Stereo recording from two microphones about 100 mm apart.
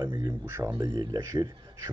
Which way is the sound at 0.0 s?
50° right (ahead or behind).